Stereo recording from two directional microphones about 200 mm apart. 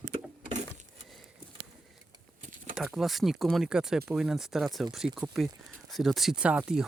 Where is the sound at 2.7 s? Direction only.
Centre (ahead or behind).